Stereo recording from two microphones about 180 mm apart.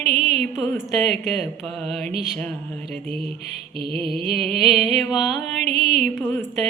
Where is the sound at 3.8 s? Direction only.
30° right (ahead or behind).